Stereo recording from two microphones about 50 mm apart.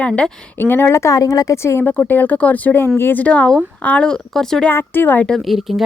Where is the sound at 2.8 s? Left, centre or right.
Left.